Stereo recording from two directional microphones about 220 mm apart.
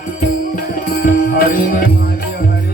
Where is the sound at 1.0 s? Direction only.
40° left (ahead or behind).